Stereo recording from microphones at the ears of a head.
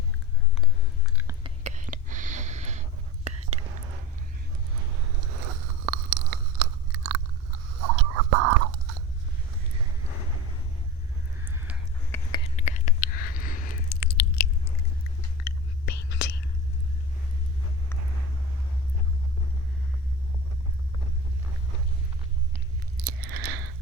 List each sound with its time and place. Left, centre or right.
1.7 s whispering: right
4.7 s biting: right
12.1 s a sound: left
22.5 s chewing: right